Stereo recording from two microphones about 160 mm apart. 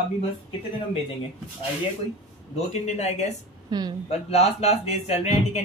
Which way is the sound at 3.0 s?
40° left (ahead or behind).